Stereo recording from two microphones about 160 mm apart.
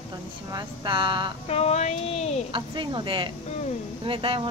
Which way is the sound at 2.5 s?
30° right (ahead or behind).